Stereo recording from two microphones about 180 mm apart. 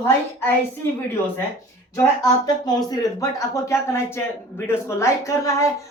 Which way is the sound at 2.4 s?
20° left (ahead or behind).